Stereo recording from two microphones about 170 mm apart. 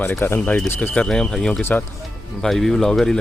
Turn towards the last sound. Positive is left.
turn(degrees=5)  # may be behind; listen again after turning